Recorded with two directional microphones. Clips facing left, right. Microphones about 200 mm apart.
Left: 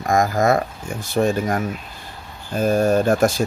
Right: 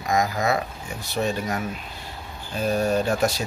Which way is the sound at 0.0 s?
50° left (ahead or behind).